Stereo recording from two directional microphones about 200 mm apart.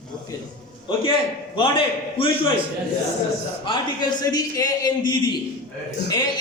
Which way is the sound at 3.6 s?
25° left (ahead or behind).